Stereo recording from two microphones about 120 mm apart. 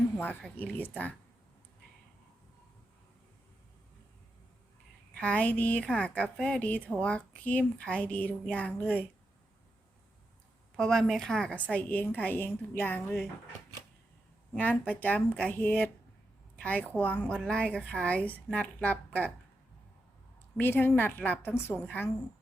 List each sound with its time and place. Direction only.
0.5 s a woman's voice: 15° left (ahead or behind)
5.1 s a woman's voice: 10° left (ahead or behind)
10.8 s a woman's voice: 5° left (ahead or behind)
14.5 s a woman's voice: 10° left (ahead or behind)
20.6 s a woman's voice: 15° left (ahead or behind)